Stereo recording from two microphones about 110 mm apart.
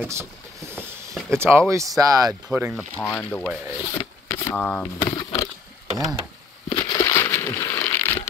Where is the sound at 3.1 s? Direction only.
15° left (ahead or behind).